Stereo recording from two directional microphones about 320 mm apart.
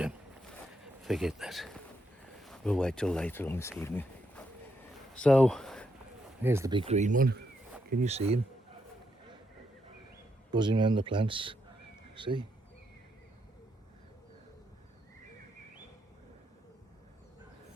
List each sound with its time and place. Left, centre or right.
1.0 s speech: centre
5.1 s a sound: centre
6.4 s speech: centre
10.5 s speech: centre